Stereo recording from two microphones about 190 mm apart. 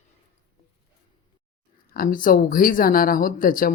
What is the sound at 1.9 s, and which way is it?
Speech, 50° left (ahead or behind).